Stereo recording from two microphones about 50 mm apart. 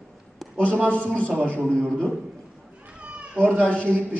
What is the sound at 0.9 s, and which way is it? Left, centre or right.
Speech, left.